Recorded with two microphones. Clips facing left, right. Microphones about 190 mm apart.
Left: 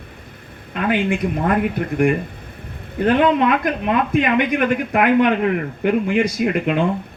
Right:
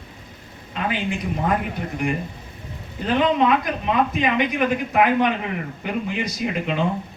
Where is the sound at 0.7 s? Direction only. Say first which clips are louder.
Left 6 dB; 55° left (ahead or behind).